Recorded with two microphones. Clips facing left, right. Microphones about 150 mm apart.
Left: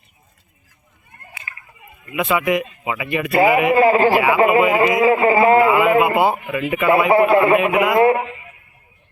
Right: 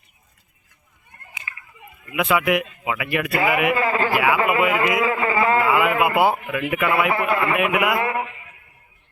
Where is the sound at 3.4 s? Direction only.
35° left (ahead or behind).